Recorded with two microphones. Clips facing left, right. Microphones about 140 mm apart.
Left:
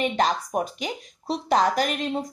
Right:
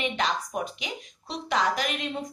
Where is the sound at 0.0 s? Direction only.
40° left (ahead or behind).